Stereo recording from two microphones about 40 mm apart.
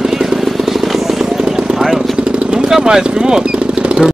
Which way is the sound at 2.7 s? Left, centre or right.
Centre.